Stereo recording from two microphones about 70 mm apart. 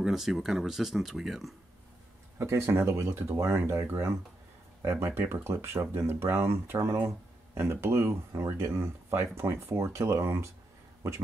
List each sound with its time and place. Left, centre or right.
0.0 s speech: centre
2.3 s speech: right